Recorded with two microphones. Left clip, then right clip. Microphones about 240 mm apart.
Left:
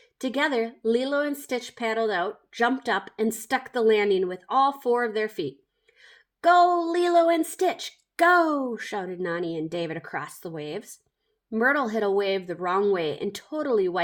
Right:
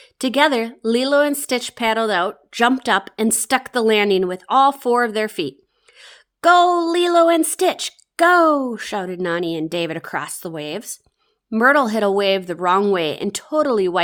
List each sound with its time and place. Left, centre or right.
0.3 s a woman's voice: right